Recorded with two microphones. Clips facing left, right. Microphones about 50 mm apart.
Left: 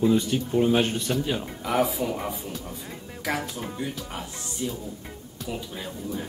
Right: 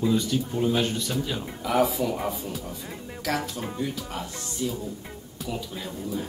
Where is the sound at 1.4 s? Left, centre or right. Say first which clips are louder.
Right 1 dB; centre.